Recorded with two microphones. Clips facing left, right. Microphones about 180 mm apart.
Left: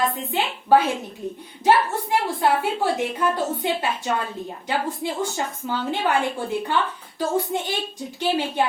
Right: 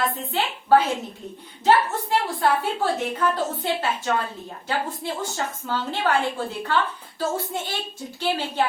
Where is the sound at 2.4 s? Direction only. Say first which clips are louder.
Left 2 dB; 15° left (ahead or behind).